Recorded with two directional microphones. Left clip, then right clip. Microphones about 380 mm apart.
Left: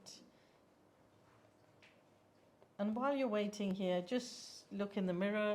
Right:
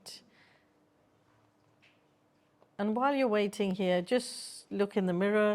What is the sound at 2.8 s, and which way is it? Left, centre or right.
Speech, right.